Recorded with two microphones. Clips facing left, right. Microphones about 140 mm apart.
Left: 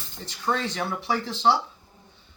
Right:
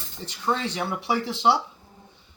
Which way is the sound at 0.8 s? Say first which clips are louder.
Right 1 dB; 20° right (ahead or behind).